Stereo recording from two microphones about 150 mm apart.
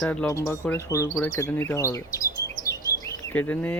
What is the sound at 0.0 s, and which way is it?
Speech, 10° left (ahead or behind).